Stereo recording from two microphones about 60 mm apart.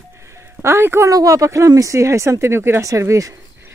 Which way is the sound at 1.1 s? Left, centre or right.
Right.